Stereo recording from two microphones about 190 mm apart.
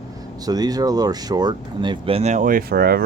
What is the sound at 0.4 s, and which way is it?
Speech, 20° right (ahead or behind).